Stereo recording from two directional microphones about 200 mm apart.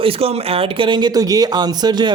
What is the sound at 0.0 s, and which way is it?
A woman's voice, 30° right (ahead or behind).